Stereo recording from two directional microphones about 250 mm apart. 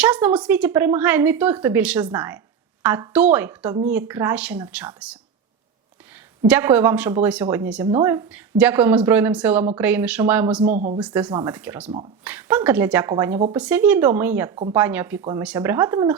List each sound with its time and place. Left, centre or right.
0.0 s speech: centre
6.5 s speech: centre
10.6 s speech: right
11.0 s speech: centre
11.3 s speech: centre
11.5 s speech: centre